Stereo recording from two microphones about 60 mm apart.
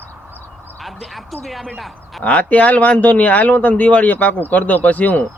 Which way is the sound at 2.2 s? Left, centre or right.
Left.